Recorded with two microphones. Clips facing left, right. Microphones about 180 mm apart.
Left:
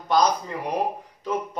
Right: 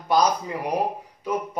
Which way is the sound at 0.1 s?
10° right (ahead or behind).